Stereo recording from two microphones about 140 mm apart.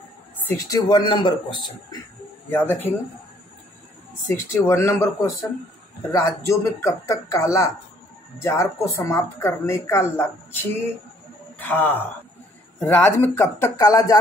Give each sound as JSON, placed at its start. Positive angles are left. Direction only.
{"t": 0.4, "sound": "speech", "side_deg": 20}
{"t": 2.5, "sound": "speech", "side_deg": 15}
{"t": 4.3, "sound": "speech", "side_deg": 20}